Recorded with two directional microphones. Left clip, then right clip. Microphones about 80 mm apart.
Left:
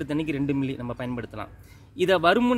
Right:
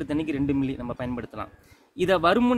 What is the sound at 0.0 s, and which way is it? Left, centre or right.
Speech, right.